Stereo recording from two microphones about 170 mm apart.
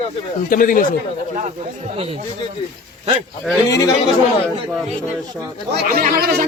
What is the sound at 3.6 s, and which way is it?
Speech, 20° left (ahead or behind).